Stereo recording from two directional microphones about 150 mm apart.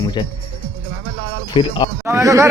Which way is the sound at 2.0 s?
20° right (ahead or behind).